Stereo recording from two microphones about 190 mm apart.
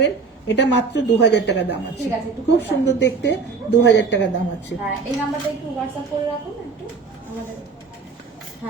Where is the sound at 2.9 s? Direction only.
65° left (ahead or behind).